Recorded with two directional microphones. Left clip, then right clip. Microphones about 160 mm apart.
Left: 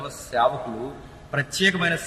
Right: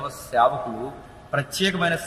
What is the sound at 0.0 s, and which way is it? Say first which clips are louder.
A man's voice: right 2 dB; 5° left (ahead or behind).